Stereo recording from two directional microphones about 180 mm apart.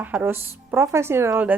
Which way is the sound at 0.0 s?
10° right (ahead or behind).